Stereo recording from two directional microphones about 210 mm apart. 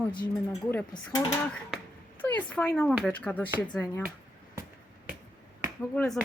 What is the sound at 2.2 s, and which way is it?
Speech, 5° left (ahead or behind).